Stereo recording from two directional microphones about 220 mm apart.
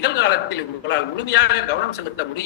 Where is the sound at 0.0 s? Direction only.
50° left (ahead or behind).